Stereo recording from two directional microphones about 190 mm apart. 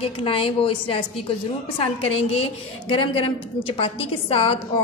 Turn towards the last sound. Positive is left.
turn(degrees=30)  # may be behind; listen again after turning